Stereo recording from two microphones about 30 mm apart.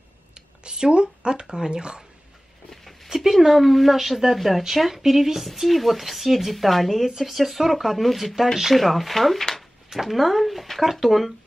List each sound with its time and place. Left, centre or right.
0.3 s speech: right
2.7 s a sound: centre
3.3 s a woman's voice: centre
5.5 s a woman's voice: centre